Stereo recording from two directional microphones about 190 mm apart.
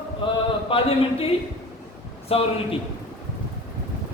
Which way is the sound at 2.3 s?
30° left (ahead or behind).